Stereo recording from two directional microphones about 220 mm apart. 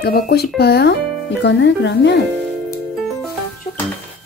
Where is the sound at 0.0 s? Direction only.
45° left (ahead or behind).